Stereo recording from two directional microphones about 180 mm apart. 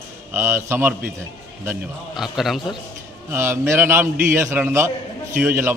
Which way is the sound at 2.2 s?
Centre (ahead or behind).